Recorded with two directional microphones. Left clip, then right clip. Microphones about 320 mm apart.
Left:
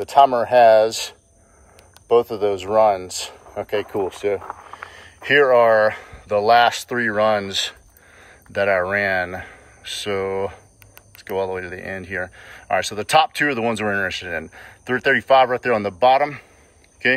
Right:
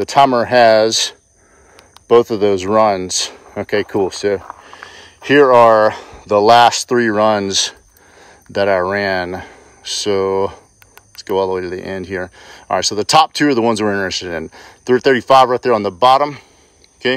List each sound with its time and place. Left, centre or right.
0.0 s speech: right